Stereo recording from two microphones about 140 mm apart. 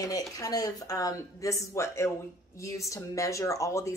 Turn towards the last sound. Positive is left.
turn(degrees=20)  # may be behind; listen again after turning